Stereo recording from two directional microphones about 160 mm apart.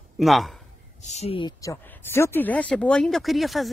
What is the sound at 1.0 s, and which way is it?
Speech, 45° left (ahead or behind).